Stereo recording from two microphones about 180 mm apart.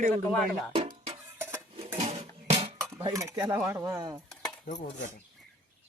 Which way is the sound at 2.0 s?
35° right (ahead or behind).